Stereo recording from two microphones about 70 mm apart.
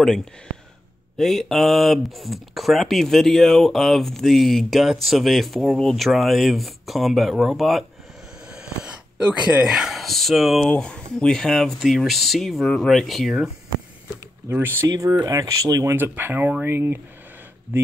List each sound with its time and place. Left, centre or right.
0.0 s speech: centre
8.5 s a sound: centre
9.7 s speech: centre
10.7 s speech: centre
14.5 s speech: right
14.9 s speech: right
16.0 s speech: right